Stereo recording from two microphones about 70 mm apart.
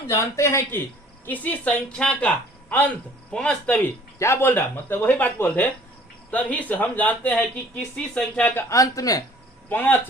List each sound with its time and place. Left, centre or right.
0.1 s a man's voice: left
1.2 s speech: left
4.2 s a man's voice: left
7.9 s speech: centre
8.4 s speech: left
8.7 s speech: left
9.6 s speech: left